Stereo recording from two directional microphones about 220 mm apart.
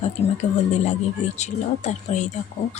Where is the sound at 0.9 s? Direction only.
30° left (ahead or behind).